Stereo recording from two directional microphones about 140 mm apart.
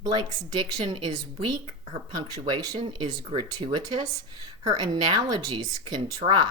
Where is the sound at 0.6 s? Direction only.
35° right (ahead or behind).